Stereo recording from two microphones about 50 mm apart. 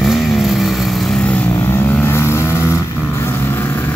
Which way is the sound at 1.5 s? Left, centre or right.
Left.